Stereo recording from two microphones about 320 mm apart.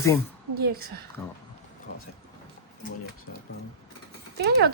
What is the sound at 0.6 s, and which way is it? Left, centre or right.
Speech, right.